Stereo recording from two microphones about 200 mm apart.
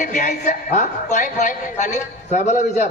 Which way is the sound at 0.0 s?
40° left (ahead or behind).